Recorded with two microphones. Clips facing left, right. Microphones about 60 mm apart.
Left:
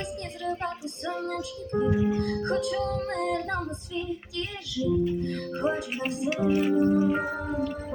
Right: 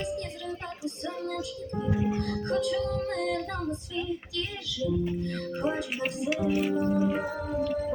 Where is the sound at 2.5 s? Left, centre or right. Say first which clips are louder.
Right 2 dB; left.